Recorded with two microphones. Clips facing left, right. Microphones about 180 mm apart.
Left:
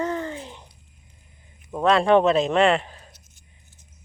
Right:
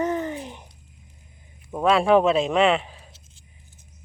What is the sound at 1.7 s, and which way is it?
Speech, 5° right (ahead or behind).